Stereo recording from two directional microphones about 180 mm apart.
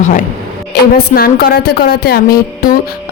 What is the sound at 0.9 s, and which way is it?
Speech, 60° left (ahead or behind).